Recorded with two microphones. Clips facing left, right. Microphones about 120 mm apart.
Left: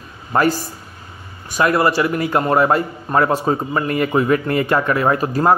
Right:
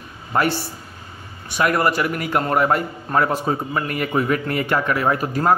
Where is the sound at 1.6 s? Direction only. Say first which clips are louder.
Left 3 dB; 30° left (ahead or behind).